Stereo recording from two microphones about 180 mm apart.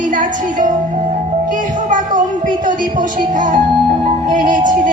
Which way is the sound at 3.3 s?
45° right (ahead or behind).